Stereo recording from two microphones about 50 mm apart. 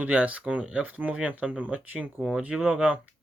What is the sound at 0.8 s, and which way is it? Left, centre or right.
Speech, right.